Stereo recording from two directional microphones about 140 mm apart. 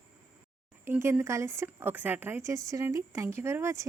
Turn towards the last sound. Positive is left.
turn(degrees=-20)  # may be behind; listen again after turning